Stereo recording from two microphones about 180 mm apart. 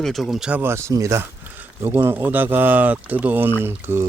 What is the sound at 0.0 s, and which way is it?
Speech, centre (ahead or behind).